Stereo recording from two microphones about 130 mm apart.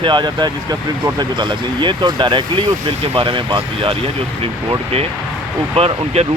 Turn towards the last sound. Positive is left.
turn(degrees=-50)  # may be behind; listen again after turning